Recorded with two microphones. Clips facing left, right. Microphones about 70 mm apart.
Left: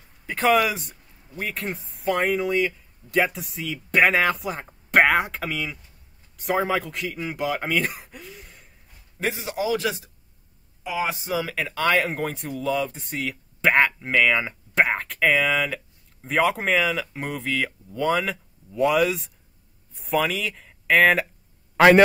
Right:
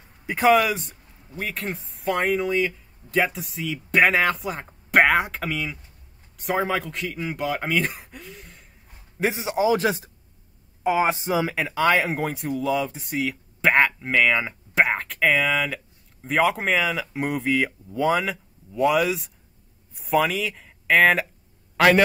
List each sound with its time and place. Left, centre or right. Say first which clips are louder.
0.3 s speech: right 2 dB; centre
9.2 s a man's voice: right 4 dB; right
11.3 s speech: right 3 dB; centre
21.7 s a man's voice: left 3 dB; left